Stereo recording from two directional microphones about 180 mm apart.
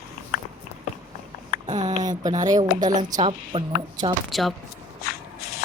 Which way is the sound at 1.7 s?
40° right (ahead or behind).